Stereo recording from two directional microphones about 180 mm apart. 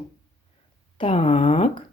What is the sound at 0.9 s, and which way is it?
Speech, 35° left (ahead or behind).